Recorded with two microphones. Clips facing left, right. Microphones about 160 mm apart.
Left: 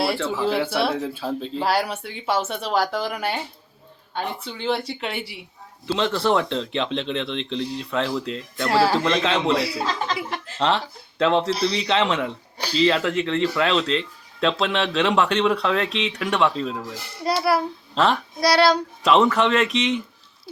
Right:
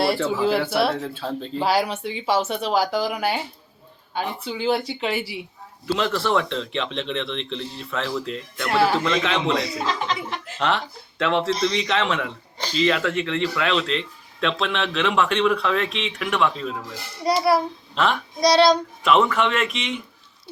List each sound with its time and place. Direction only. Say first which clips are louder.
0.0 s speech: right 2 dB; centre (ahead or behind)
6.0 s a man's voice: left 2 dB; 30° left (ahead or behind)
11.2 s speech: left 1 dB; 30° left (ahead or behind)
17.2 s speech: right 2 dB; centre (ahead or behind)
17.9 s speech: left 2 dB; 35° left (ahead or behind)
18.3 s speech: right 3 dB; 5° left (ahead or behind)
19.0 s speech: left 1 dB; 35° left (ahead or behind)